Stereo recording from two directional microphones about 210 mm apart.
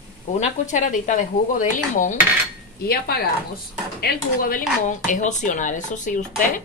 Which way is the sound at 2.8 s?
50° left (ahead or behind).